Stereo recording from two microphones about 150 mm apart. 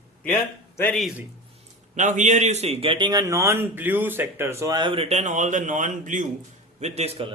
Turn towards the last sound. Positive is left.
turn(degrees=-40)  # may be behind; listen again after turning